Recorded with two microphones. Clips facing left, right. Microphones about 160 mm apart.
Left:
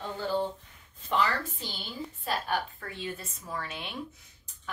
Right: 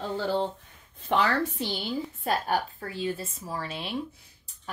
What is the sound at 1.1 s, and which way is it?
A woman's voice, 70° right (ahead or behind).